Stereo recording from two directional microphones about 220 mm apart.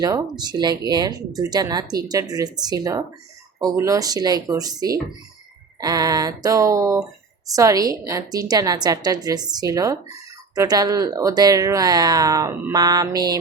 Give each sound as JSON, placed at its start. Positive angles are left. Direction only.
{"t": 0.0, "sound": "speech", "side_deg": -20}